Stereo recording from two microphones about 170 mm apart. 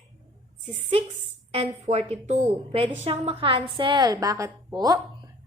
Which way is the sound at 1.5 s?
40° right (ahead or behind).